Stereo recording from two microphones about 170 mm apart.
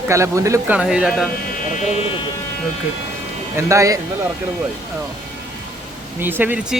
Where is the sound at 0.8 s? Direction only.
5° right (ahead or behind).